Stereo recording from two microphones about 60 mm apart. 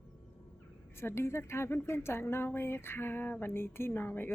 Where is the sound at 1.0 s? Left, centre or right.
Left.